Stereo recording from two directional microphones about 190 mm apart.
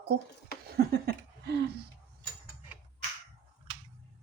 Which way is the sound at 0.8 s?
55° right (ahead or behind).